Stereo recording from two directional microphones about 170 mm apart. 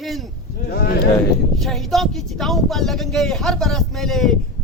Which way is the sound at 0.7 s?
65° left (ahead or behind).